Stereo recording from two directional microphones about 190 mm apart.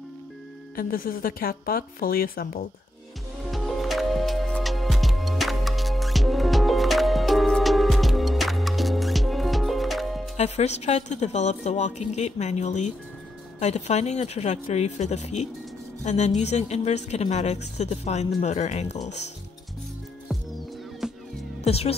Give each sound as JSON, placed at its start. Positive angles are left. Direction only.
{"t": 0.7, "sound": "speech", "side_deg": 50}
{"t": 3.4, "sound": "music", "side_deg": 0}
{"t": 10.3, "sound": "a woman's voice", "side_deg": 35}
{"t": 21.0, "sound": "music", "side_deg": -5}
{"t": 21.6, "sound": "a woman's voice", "side_deg": 30}